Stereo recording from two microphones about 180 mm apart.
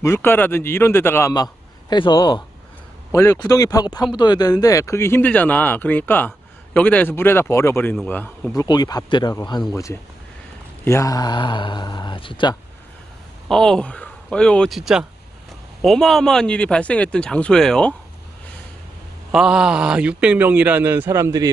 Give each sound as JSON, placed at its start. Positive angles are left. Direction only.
{"t": 0.0, "sound": "speech", "side_deg": 15}
{"t": 8.6, "sound": "speech", "side_deg": 20}
{"t": 10.8, "sound": "speech", "side_deg": 15}
{"t": 13.5, "sound": "speech", "side_deg": 5}
{"t": 19.3, "sound": "a man's voice", "side_deg": -5}